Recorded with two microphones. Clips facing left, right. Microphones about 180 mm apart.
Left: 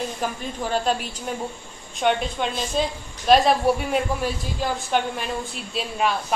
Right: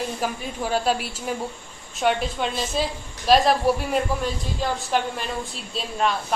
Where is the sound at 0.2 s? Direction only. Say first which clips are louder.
Even; 5° right (ahead or behind).